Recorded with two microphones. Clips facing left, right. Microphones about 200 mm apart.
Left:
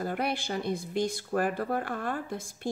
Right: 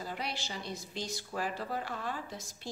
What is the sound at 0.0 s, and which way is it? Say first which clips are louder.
A woman's voice: left 8 dB; 55° left (ahead or behind).